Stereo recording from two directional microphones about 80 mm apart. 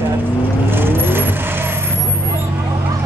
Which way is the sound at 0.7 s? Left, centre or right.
Right.